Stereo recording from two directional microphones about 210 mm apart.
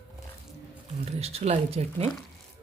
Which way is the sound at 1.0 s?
30° right (ahead or behind).